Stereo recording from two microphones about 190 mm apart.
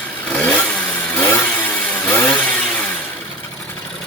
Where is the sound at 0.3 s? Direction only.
5° left (ahead or behind).